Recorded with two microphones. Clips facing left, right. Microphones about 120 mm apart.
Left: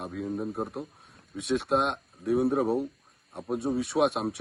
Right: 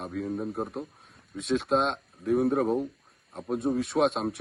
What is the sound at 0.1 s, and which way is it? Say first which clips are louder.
Speech: right 2 dB; centre (ahead or behind).